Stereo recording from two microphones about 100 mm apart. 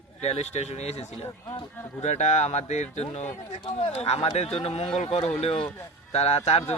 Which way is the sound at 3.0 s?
90° left.